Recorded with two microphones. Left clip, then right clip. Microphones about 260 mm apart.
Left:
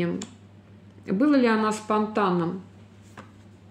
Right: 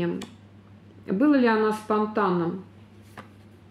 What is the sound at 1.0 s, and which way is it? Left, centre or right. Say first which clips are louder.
Speech: even; left.